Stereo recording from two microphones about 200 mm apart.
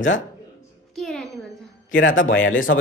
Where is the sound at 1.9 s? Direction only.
70° left (ahead or behind).